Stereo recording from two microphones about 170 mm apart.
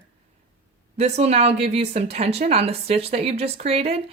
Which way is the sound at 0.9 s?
40° right (ahead or behind).